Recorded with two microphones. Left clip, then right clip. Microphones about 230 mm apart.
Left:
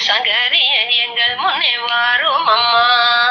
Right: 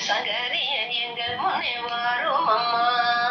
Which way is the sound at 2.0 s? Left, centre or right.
Left.